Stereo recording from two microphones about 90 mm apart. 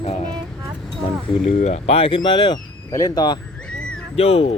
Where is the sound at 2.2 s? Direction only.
75° left (ahead or behind).